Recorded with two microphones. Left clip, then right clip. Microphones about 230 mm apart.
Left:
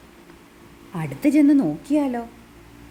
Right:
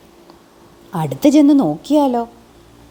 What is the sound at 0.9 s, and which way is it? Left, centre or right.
A woman's voice, right.